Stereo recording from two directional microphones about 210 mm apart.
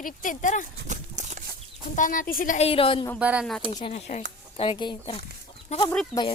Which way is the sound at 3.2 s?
5° right (ahead or behind).